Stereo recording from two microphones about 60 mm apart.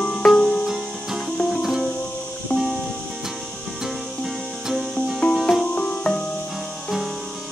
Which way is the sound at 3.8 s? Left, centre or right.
Centre.